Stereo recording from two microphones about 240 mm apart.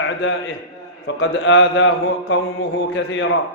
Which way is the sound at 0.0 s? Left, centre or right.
Left.